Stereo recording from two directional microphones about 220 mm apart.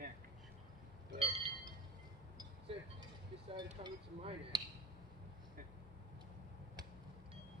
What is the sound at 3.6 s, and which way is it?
Speech, 20° right (ahead or behind).